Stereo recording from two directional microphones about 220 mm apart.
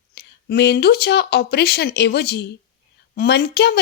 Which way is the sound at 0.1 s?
50° left (ahead or behind).